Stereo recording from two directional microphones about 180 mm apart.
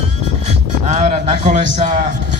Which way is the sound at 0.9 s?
35° right (ahead or behind).